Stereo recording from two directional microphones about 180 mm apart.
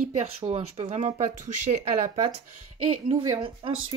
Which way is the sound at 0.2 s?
35° right (ahead or behind).